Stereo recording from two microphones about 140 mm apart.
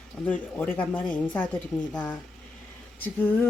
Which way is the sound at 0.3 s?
10° left (ahead or behind).